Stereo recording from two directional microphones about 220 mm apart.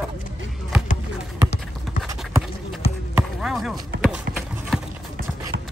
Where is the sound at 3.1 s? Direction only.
Centre (ahead or behind).